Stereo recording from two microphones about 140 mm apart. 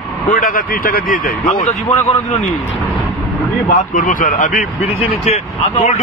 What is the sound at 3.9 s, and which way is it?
Speech, 70° left (ahead or behind).